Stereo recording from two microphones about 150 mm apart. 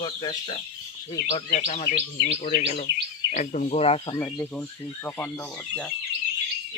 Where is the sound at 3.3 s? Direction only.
55° left (ahead or behind).